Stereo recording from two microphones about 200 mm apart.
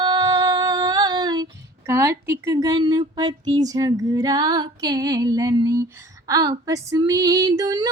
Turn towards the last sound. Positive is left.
turn(degrees=-20)  # may be behind; listen again after turning